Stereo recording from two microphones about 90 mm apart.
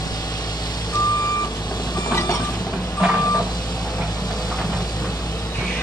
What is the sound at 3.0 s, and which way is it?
Reversing beeps, 10° right (ahead or behind).